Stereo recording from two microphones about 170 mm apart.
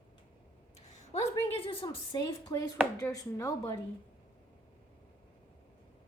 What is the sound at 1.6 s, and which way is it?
A woman's voice, 30° left (ahead or behind).